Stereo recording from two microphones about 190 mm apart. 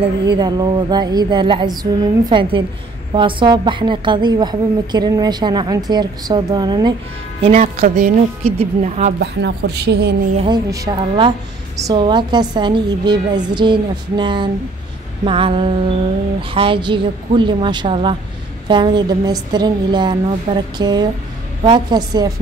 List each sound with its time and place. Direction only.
0.3 s a woman's voice: 20° right (ahead or behind)
7.5 s a woman's voice: 35° right (ahead or behind)
9.2 s speech: 60° right (ahead or behind)
10.3 s a woman's voice: 25° right (ahead or behind)